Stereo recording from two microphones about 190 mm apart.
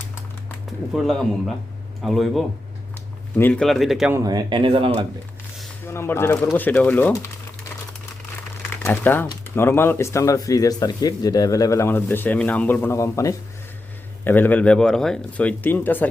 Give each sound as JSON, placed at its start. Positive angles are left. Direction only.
{"t": 0.9, "sound": "speech", "side_deg": 0}
{"t": 4.1, "sound": "speech", "side_deg": -20}
{"t": 5.8, "sound": "speech", "side_deg": 10}
{"t": 8.7, "sound": "speech", "side_deg": 10}